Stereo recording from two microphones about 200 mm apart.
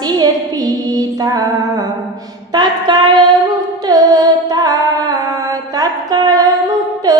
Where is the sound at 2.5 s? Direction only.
20° right (ahead or behind).